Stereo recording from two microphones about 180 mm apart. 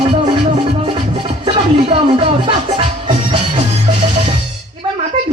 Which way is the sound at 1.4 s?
30° right (ahead or behind).